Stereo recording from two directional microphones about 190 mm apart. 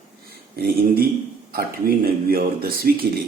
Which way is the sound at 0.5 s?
55° right (ahead or behind).